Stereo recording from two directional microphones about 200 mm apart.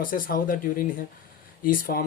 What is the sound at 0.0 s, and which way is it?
Speech, 45° left (ahead or behind).